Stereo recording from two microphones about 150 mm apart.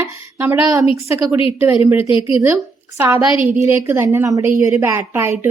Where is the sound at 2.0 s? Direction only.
35° left (ahead or behind).